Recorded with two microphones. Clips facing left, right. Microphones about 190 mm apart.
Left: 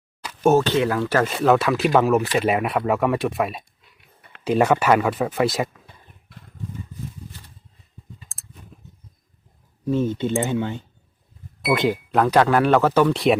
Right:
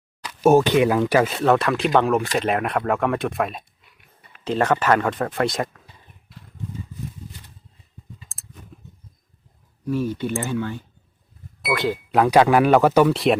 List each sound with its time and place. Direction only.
0.4 s speech: 15° right (ahead or behind)
1.3 s speech: centre (ahead or behind)
8.3 s clicking: centre (ahead or behind)
9.8 s speech: 25° left (ahead or behind)
12.1 s speech: 10° right (ahead or behind)